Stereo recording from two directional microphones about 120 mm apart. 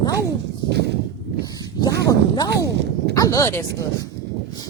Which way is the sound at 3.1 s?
30° left (ahead or behind).